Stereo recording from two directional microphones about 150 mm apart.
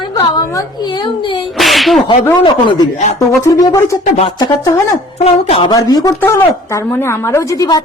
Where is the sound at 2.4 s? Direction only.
30° left (ahead or behind).